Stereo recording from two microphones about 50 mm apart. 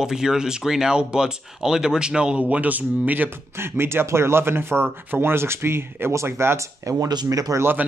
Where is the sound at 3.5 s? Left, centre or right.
Right.